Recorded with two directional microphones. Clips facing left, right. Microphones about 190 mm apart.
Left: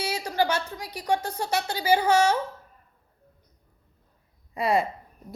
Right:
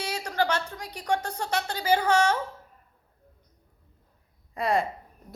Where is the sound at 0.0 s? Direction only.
10° left (ahead or behind).